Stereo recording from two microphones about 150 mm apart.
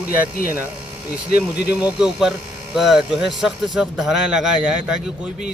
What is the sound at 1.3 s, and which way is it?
Speech, 90° left.